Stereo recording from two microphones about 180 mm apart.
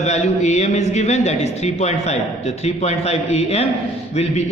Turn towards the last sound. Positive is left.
turn(degrees=35)  # may be behind; listen again after turning